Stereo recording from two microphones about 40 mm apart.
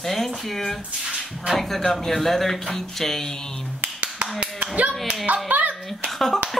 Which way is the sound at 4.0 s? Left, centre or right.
Right.